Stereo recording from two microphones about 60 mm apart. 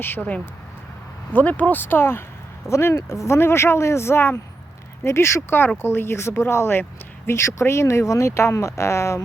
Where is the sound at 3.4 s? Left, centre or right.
Left.